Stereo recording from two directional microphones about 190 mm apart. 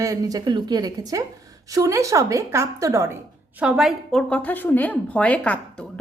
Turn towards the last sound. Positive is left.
turn(degrees=5)  # may be behind; listen again after turning